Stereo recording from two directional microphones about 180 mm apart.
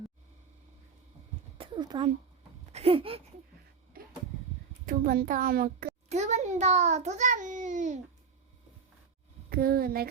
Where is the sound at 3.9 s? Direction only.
55° right (ahead or behind).